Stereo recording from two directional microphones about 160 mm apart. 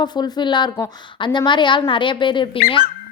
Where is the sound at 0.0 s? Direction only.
25° left (ahead or behind).